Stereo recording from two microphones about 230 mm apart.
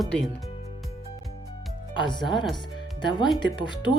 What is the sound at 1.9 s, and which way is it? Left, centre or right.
Speech, centre.